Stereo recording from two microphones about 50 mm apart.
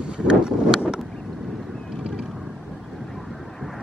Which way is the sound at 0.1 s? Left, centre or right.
Centre.